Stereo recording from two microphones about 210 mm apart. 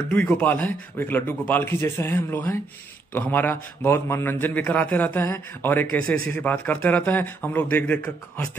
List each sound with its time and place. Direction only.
0.1 s a man's voice: 10° left (ahead or behind)